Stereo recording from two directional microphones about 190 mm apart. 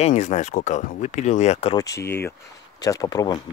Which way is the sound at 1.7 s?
20° left (ahead or behind).